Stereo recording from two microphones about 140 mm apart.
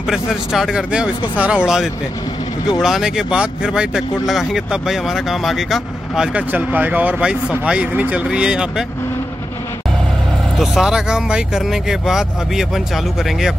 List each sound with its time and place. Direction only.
0.1 s speech: 5° right (ahead or behind)
10.6 s speech: 5° right (ahead or behind)